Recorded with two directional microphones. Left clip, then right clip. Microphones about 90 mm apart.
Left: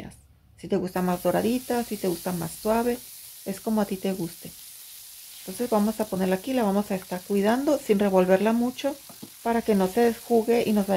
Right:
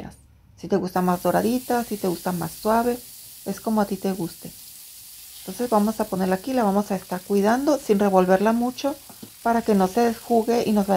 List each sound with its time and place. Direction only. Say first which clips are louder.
0.6 s speech: right 4 dB; 15° right (ahead or behind)
3.4 s speech: right 4 dB; 5° right (ahead or behind)
5.8 s speech: right 4 dB; 5° right (ahead or behind); by 10.8 s 20° right (ahead or behind)